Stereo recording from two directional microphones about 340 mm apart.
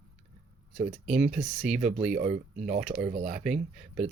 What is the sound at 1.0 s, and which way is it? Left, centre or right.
Speech, centre.